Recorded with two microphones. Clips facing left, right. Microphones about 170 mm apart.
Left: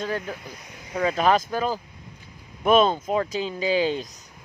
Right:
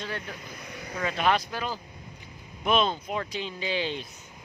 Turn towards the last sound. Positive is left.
turn(degrees=40)  # may be behind; listen again after turning